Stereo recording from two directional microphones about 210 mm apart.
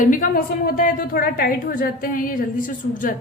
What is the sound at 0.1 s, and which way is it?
A woman's voice, 40° left (ahead or behind).